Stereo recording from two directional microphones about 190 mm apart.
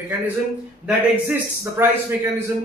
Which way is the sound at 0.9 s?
5° right (ahead or behind).